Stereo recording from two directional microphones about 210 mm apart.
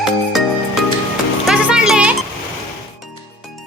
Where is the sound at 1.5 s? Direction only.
5° right (ahead or behind).